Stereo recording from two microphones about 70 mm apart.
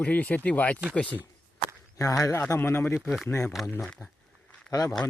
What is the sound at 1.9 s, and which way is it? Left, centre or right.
Speech, left.